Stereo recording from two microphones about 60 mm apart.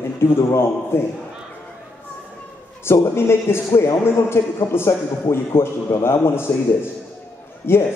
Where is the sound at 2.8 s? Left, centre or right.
Left.